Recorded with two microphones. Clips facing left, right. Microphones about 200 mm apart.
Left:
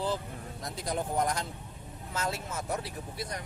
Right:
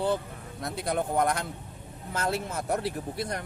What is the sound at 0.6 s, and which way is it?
Speech, 60° right (ahead or behind).